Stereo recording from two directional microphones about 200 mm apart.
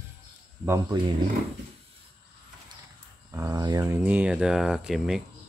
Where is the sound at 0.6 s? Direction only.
15° right (ahead or behind).